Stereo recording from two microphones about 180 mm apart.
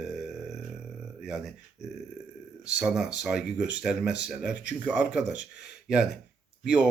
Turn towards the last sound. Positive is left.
turn(degrees=-5)  # may be behind; listen again after turning